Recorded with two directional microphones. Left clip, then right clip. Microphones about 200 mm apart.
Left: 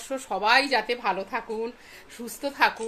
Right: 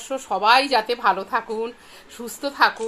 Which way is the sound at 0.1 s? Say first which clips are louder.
Right 5 dB; 10° left (ahead or behind).